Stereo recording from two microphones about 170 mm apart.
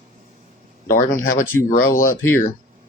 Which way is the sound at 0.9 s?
55° left (ahead or behind).